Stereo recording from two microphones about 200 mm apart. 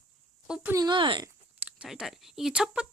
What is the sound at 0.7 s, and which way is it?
Speech, 20° right (ahead or behind).